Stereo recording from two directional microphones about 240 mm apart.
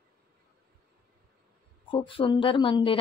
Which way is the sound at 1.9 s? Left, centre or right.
Left.